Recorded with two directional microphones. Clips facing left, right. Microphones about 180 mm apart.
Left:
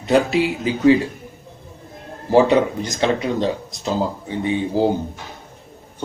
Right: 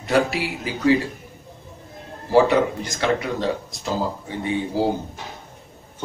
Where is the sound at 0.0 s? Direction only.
20° left (ahead or behind).